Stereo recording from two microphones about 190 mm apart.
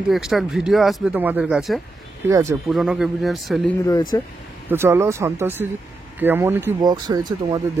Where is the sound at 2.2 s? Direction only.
15° right (ahead or behind).